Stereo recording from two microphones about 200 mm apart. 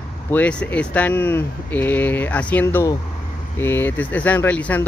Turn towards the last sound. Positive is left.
turn(degrees=10)  # may be behind; listen again after turning